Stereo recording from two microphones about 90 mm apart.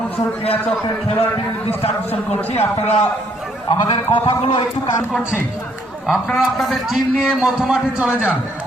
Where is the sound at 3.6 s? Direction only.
65° left (ahead or behind).